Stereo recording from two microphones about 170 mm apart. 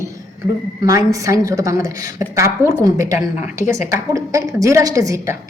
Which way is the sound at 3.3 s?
45° left (ahead or behind).